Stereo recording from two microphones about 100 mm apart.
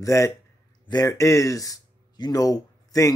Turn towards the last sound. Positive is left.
turn(degrees=35)  # may be behind; listen again after turning